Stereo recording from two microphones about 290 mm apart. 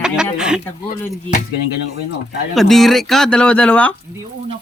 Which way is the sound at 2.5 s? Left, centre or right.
Centre.